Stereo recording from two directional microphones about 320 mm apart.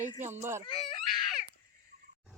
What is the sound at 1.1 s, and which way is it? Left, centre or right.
Baby cry, centre.